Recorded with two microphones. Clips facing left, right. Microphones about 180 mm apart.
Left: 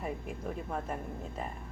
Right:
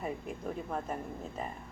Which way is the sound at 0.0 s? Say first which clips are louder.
Even; centre (ahead or behind).